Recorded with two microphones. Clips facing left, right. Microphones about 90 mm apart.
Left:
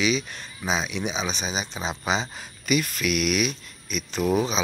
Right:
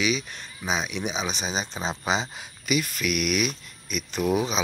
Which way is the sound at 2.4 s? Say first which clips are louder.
Left 2 dB; 10° right (ahead or behind).